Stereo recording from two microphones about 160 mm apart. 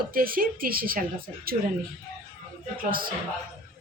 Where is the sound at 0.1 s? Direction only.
65° right (ahead or behind).